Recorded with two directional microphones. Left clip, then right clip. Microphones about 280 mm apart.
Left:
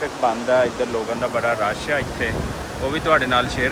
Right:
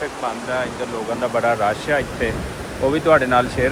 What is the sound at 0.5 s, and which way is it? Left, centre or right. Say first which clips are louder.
Speech: left 6 dB; centre.